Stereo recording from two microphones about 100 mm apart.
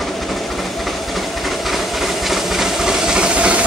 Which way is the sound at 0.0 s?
Centre (ahead or behind).